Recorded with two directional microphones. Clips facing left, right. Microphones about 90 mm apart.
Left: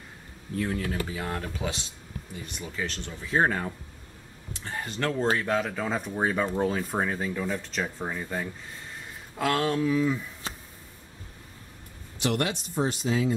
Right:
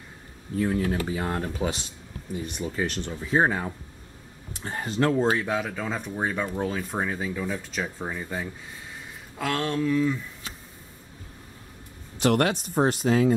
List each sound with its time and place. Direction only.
0.7 s speech: 25° right (ahead or behind)
3.2 s speech: 10° right (ahead or behind)
4.6 s speech: 30° right (ahead or behind)
5.0 s speech: 10° right (ahead or behind); by 10.2 s 5° left (ahead or behind)
10.4 s a sound: 35° left (ahead or behind)
12.2 s speech: 50° right (ahead or behind)